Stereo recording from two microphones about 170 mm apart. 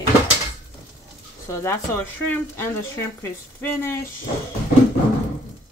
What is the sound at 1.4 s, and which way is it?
Speech, 15° left (ahead or behind).